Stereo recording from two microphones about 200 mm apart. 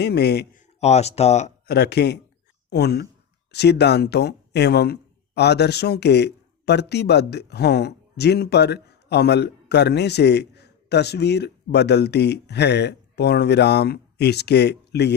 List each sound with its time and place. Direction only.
0.0 s a man's voice: 55° left (ahead or behind)
0.8 s speech: 35° left (ahead or behind)
1.6 s speech: 55° left (ahead or behind)